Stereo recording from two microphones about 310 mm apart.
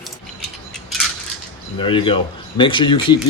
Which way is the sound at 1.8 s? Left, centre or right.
Centre.